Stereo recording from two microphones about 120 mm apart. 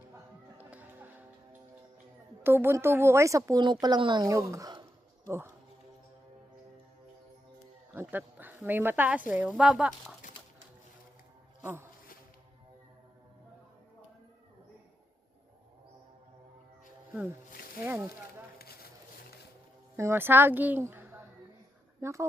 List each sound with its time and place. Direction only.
0.6 s music: 15° right (ahead or behind)
2.4 s speech: 20° right (ahead or behind)
3.6 s speech: 35° right (ahead or behind)
4.3 s speech: 25° right (ahead or behind)
7.9 s speech: 15° right (ahead or behind)
11.6 s speech: 20° right (ahead or behind)
17.8 s speech: 20° right (ahead or behind)
20.0 s speech: 20° right (ahead or behind)